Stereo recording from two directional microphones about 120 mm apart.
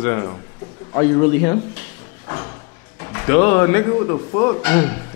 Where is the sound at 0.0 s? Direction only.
25° left (ahead or behind).